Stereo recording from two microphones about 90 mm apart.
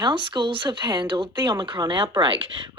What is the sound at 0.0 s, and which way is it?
Speech, 65° right (ahead or behind).